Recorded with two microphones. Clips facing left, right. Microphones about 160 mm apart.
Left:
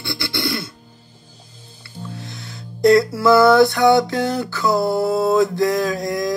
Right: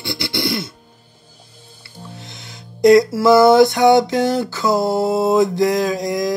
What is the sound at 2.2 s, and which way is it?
Music, 20° right (ahead or behind).